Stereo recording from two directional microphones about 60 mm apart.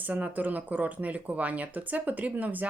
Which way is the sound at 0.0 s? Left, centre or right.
Right.